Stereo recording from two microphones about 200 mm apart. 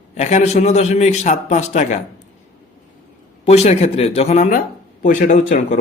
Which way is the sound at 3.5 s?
35° left (ahead or behind).